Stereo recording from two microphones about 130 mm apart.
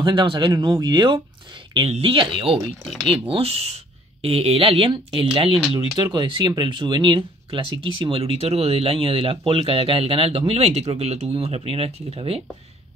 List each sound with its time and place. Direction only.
0.0 s speech: 40° right (ahead or behind)